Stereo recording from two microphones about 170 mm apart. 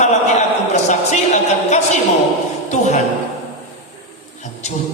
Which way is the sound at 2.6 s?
40° left (ahead or behind).